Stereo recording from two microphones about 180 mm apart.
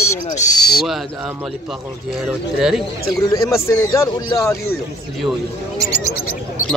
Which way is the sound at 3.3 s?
15° left (ahead or behind).